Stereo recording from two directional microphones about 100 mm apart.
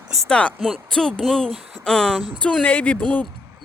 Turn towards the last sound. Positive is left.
turn(degrees=10)  # may be behind; listen again after turning